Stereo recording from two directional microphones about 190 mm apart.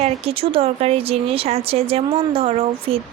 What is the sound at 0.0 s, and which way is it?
Speech, 30° right (ahead or behind).